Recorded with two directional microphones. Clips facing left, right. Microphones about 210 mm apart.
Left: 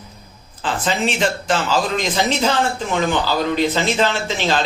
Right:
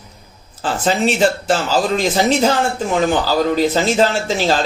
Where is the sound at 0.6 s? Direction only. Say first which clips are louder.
Right 4 dB; 40° right (ahead or behind).